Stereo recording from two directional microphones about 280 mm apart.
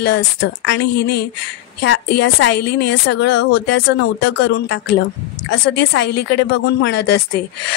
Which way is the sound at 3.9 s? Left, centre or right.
Left.